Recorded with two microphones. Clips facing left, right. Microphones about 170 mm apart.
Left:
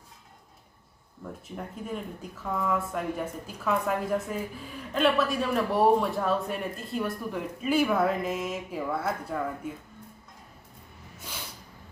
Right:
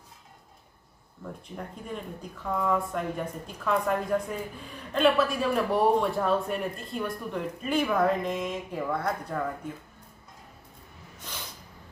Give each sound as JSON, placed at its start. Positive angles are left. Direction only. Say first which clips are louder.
{"t": 1.2, "sound": "a man's voice", "louder": "even", "side_deg": 5}